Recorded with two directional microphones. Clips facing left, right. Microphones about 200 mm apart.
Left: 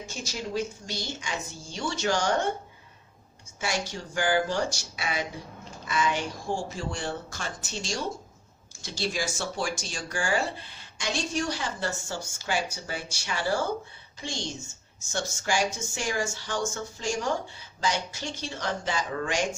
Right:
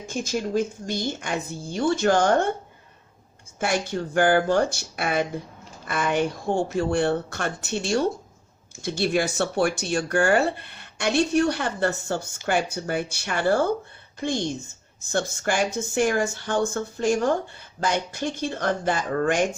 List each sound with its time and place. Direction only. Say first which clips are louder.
0.0 s speech: right 8 dB; 55° right (ahead or behind)
3.6 s speech: right 7 dB; 55° right (ahead or behind)